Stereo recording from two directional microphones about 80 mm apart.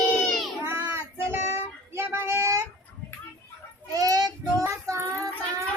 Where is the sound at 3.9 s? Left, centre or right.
Right.